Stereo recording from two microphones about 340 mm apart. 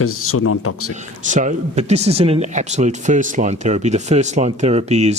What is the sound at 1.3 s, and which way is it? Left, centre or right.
Speech, right.